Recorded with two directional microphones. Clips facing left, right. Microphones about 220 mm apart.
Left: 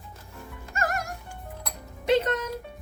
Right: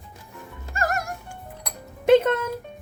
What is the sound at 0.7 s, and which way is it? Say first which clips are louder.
Music: right 3 dB; 40° right (ahead or behind).